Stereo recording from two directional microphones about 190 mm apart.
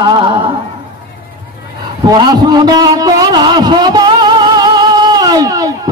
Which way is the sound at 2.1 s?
20° right (ahead or behind).